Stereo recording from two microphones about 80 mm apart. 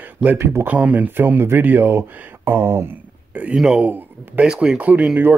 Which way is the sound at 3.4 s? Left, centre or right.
Centre.